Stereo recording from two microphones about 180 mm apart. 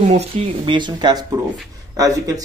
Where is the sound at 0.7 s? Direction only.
25° right (ahead or behind).